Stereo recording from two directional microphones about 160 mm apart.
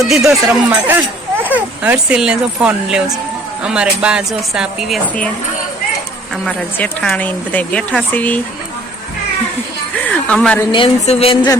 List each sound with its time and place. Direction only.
0.0 s speech: centre (ahead or behind)
6.3 s speech: 5° left (ahead or behind)
9.9 s music: 5° left (ahead or behind)
10.7 s a woman's voice: 35° left (ahead or behind)